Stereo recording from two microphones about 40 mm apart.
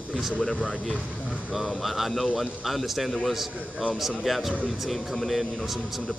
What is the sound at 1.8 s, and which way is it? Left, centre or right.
Speech, centre.